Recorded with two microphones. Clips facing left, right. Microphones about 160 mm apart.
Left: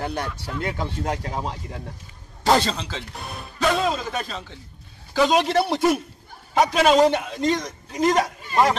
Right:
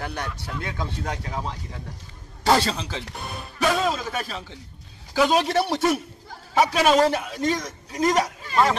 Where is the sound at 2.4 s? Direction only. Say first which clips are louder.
Left 1 dB; 5° right (ahead or behind).